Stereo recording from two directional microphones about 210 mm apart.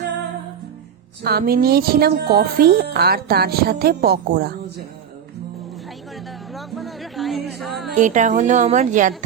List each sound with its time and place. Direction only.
1.2 s a woman's voice: 50° right (ahead or behind)
6.5 s music: centre (ahead or behind)
7.9 s a woman's voice: 35° right (ahead or behind)